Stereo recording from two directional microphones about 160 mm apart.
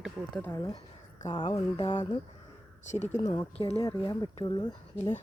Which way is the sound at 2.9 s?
45° left (ahead or behind).